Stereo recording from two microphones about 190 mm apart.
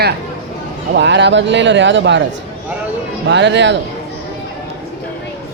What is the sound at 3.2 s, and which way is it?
Speech, 70° right (ahead or behind).